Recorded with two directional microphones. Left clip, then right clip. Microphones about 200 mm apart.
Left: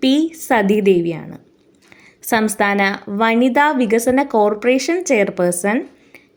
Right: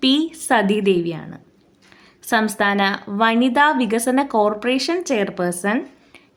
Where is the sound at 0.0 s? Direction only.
5° left (ahead or behind).